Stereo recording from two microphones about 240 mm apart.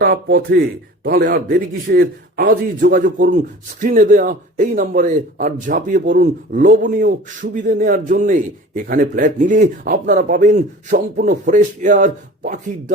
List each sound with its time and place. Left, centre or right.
0.0 s a man's voice: right